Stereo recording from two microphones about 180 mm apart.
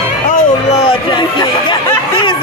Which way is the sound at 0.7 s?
30° left (ahead or behind).